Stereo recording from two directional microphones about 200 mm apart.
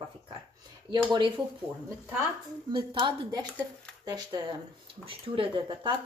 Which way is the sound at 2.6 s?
20° right (ahead or behind).